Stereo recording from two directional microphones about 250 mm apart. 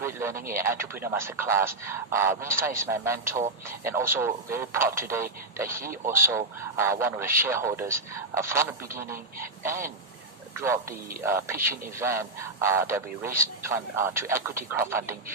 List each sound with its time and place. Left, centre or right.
0.0 s radio: centre
0.3 s speech: right
0.6 s speech: centre
10.6 s speech: centre